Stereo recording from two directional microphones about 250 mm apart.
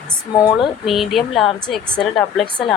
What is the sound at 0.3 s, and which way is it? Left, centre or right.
Speech, centre.